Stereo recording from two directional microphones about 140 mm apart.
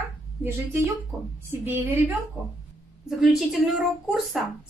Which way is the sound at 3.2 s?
5° right (ahead or behind).